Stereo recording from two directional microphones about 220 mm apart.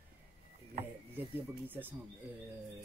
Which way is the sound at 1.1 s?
10° right (ahead or behind).